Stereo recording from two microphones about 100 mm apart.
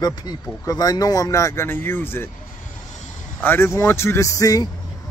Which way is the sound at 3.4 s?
25° left (ahead or behind).